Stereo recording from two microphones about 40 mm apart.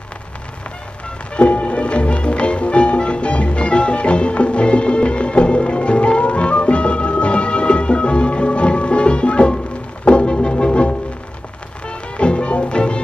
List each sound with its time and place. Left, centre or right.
1.3 s music: left